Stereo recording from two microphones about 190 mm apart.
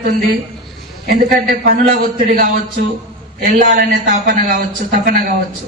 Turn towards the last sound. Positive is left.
turn(degrees=-50)  # may be behind; listen again after turning